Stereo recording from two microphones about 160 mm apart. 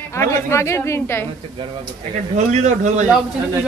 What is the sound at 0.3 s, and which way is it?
Speech, 15° left (ahead or behind).